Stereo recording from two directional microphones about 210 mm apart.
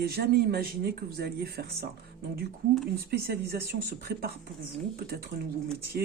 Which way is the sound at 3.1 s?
50° right (ahead or behind).